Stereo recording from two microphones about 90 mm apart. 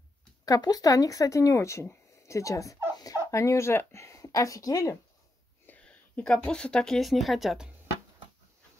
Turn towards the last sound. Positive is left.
turn(degrees=-5)  # may be behind; listen again after turning